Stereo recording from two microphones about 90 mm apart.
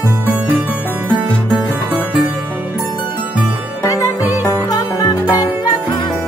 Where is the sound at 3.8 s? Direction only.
40° left (ahead or behind).